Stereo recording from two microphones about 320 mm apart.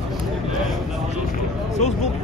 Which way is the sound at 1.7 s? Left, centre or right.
Left.